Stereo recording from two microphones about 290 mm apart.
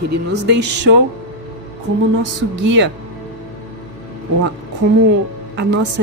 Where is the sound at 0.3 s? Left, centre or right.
Right.